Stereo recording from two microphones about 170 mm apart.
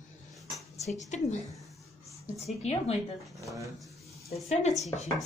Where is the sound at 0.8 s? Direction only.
40° left (ahead or behind).